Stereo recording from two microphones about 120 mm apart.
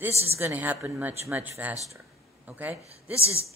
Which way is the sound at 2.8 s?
60° right (ahead or behind).